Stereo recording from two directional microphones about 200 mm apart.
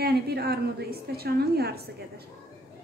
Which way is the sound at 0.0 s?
50° right (ahead or behind).